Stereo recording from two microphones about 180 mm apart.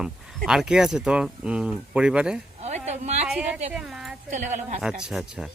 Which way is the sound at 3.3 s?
5° right (ahead or behind).